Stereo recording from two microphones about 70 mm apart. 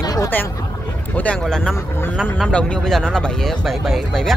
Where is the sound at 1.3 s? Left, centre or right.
Centre.